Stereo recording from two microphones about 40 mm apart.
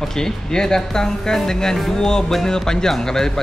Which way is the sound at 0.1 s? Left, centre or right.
Centre.